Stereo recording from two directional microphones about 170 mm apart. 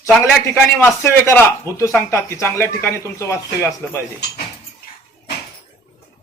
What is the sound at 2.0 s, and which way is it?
A man's voice, 15° left (ahead or behind).